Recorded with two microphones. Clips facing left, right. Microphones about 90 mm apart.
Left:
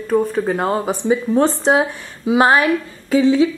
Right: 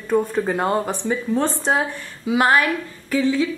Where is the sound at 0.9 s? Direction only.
15° left (ahead or behind).